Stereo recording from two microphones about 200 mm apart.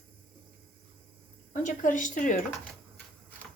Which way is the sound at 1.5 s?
40° left (ahead or behind).